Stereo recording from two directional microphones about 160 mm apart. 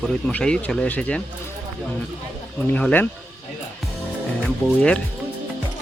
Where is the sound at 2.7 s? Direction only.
10° left (ahead or behind).